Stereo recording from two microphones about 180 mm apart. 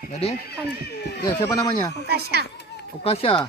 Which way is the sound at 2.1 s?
60° right (ahead or behind).